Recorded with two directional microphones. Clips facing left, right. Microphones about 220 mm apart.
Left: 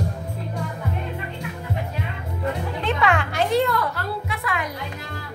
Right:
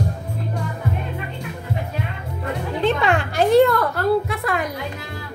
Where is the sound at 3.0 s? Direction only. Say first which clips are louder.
Right 3 dB; 35° right (ahead or behind).